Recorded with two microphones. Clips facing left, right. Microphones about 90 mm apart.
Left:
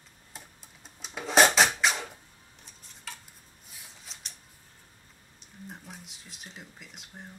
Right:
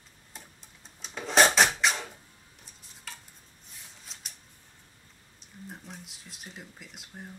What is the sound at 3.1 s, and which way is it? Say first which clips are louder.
Dishes: left 2 dB; centre (ahead or behind).